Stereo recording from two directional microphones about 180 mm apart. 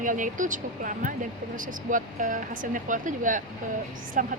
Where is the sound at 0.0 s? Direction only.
45° right (ahead or behind).